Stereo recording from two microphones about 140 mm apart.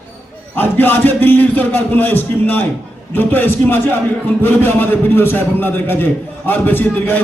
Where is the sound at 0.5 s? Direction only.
15° left (ahead or behind).